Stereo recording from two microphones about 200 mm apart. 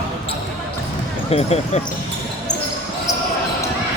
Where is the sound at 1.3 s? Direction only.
30° left (ahead or behind).